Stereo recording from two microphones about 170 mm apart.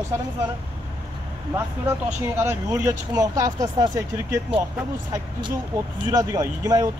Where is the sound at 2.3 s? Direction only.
15° right (ahead or behind).